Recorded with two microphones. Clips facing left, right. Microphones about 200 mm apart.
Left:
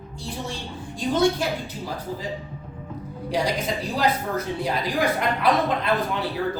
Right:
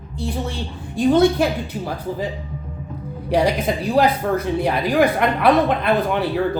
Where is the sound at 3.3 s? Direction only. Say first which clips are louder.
Right 6 dB; 60° right (ahead or behind).